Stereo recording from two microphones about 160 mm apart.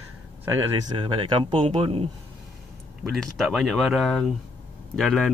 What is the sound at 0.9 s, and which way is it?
Speech, 30° right (ahead or behind).